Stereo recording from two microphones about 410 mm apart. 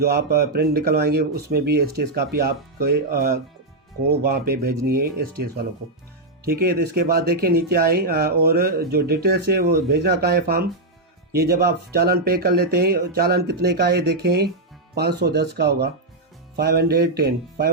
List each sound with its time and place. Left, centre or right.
0.0 s speech: right
6.4 s speech: right